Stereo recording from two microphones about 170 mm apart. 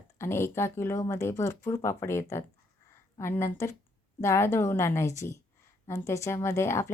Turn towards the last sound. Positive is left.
turn(degrees=15)  # may be behind; listen again after turning